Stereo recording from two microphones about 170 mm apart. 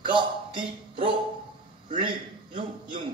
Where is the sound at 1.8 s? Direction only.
30° right (ahead or behind).